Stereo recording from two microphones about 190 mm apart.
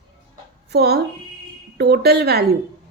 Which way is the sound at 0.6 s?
60° right (ahead or behind).